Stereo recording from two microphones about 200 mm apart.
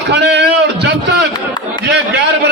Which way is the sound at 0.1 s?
60° right (ahead or behind).